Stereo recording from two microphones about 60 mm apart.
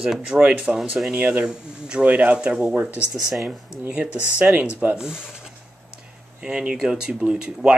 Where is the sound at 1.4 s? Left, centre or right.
Centre.